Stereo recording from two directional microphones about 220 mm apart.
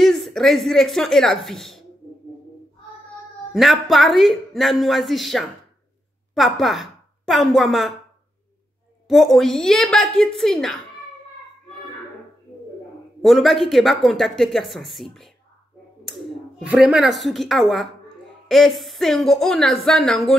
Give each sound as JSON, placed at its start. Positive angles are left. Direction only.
{"t": 0.0, "sound": "speech", "side_deg": 0}
{"t": 3.5, "sound": "a woman's voice", "side_deg": 0}
{"t": 9.0, "sound": "speech", "side_deg": 0}
{"t": 13.2, "sound": "speech", "side_deg": 0}